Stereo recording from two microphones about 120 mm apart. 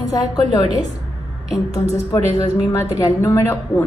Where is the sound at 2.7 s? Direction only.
25° left (ahead or behind).